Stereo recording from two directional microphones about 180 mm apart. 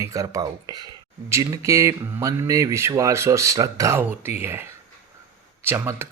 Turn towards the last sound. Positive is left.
turn(degrees=-15)  # may be behind; listen again after turning